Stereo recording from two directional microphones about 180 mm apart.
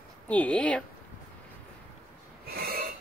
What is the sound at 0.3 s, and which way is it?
Speech, 5° left (ahead or behind).